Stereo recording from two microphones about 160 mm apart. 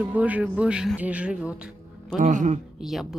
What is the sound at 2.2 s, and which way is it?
Speech, 55° right (ahead or behind).